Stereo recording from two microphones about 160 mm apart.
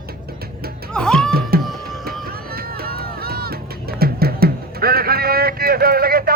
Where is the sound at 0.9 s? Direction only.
5° left (ahead or behind).